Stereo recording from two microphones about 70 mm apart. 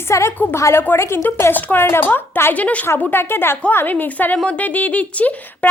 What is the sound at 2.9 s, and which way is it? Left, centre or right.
Speech, left.